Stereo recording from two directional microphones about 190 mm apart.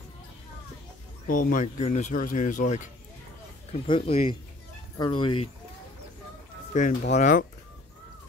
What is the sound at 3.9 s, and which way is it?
Speech, 30° left (ahead or behind).